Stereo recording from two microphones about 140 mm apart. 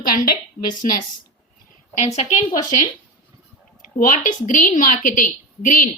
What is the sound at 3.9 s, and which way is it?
A woman's voice, 65° left (ahead or behind).